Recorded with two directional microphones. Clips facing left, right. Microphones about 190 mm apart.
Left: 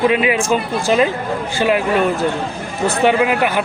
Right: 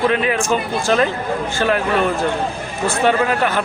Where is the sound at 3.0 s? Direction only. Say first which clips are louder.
Left 2 dB; 15° left (ahead or behind).